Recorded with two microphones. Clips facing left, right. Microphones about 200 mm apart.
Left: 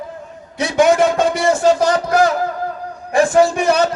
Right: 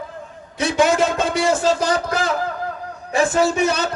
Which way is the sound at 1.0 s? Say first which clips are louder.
Left 4 dB; 55° left (ahead or behind).